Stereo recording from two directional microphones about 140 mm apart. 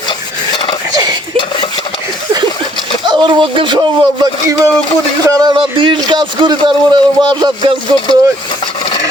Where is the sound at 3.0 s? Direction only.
35° right (ahead or behind).